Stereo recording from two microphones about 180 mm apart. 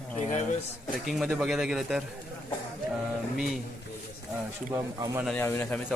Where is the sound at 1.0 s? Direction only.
Centre (ahead or behind).